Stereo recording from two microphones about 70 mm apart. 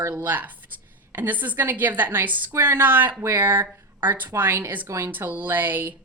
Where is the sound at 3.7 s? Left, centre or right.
Right.